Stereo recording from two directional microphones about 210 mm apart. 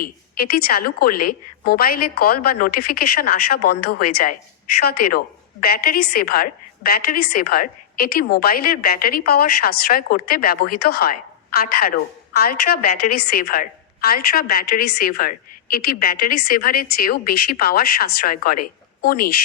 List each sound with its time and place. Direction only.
0.0 s a woman's voice: 45° left (ahead or behind)